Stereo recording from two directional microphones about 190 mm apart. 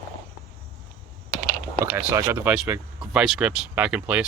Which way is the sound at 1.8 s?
10° right (ahead or behind).